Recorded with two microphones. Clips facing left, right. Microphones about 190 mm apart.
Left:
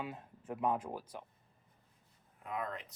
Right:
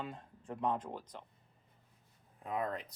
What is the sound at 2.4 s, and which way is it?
Speech, 35° right (ahead or behind).